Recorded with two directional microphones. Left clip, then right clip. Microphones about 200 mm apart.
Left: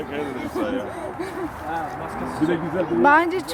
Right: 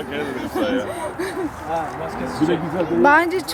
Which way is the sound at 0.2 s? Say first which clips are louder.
Right 4 dB; 25° right (ahead or behind).